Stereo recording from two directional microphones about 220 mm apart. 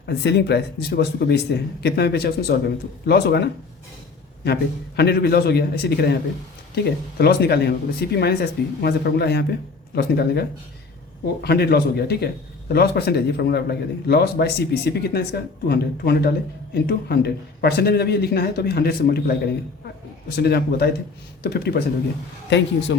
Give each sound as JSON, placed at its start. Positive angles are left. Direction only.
{"t": 0.0, "sound": "a man's voice", "side_deg": 50}
{"t": 4.9, "sound": "a man's voice", "side_deg": 45}
{"t": 7.2, "sound": "a man's voice", "side_deg": 45}
{"t": 11.4, "sound": "a man's voice", "side_deg": 45}